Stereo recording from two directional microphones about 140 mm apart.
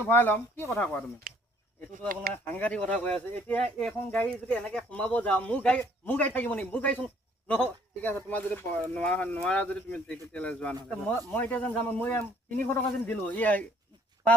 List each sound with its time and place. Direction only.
0.0 s a man's voice: 15° left (ahead or behind)
1.3 s a sound: 85° right
1.9 s speech: 90° right
2.3 s a man's voice: 15° left (ahead or behind)